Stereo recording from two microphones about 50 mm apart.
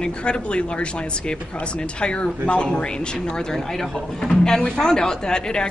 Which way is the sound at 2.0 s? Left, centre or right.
Centre.